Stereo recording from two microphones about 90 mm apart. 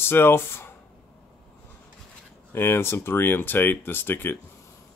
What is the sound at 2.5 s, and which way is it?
Speech, 25° left (ahead or behind).